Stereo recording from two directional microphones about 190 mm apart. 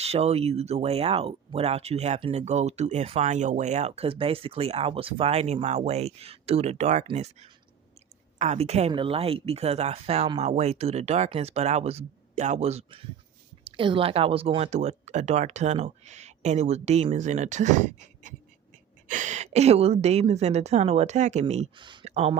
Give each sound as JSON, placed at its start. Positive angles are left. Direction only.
{"t": 0.0, "sound": "speech", "side_deg": -35}